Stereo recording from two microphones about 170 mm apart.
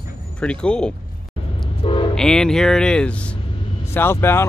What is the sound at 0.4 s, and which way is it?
Speech, 5° left (ahead or behind).